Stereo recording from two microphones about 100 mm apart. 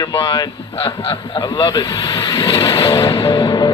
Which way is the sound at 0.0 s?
45° left (ahead or behind).